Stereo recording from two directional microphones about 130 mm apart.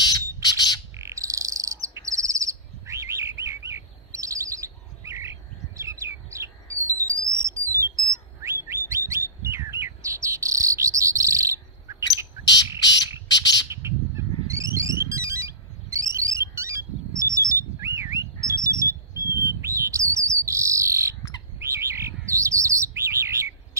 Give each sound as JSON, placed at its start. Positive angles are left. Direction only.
{"t": 0.0, "sound": "bird", "side_deg": 30}
{"t": 0.9, "sound": "bird", "side_deg": -25}
{"t": 7.3, "sound": "alarm", "side_deg": -20}
{"t": 8.4, "sound": "bird", "side_deg": -20}
{"t": 13.7, "sound": "a sound", "side_deg": -20}
{"t": 21.5, "sound": "bird", "side_deg": -20}